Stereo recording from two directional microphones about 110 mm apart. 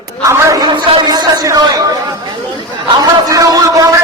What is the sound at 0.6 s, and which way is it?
A man's voice, 45° right (ahead or behind).